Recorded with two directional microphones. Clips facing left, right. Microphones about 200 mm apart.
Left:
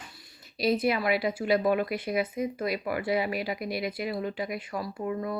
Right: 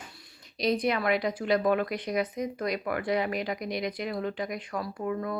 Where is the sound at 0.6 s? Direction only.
5° left (ahead or behind).